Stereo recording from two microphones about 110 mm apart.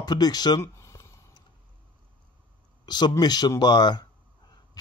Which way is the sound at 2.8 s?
40° left (ahead or behind).